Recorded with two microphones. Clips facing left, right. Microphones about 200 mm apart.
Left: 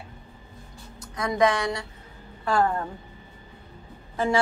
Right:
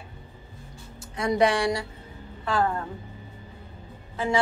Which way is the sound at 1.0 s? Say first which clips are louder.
Even; 30° right (ahead or behind).